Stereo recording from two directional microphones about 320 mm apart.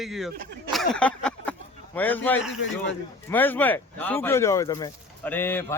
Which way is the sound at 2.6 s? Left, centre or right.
Left.